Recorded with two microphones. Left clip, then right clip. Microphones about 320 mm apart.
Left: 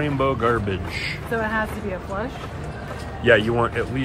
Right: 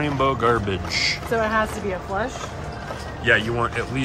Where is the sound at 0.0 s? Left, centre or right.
Centre.